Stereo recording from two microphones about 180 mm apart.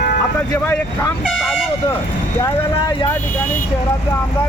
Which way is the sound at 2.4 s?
20° left (ahead or behind).